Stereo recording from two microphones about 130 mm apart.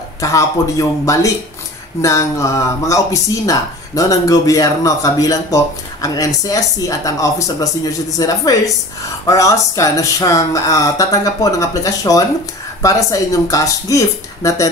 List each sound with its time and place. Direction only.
0.2 s speech: 25° left (ahead or behind)